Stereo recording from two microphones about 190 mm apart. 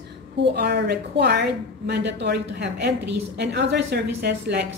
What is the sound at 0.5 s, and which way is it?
A woman's voice, 60° right (ahead or behind).